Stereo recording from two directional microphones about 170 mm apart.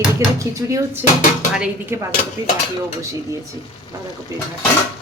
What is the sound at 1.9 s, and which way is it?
Speech, 15° right (ahead or behind).